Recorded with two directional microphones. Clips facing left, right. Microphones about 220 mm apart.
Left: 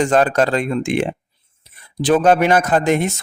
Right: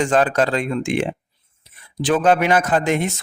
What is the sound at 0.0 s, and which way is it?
A man's voice, 40° left (ahead or behind).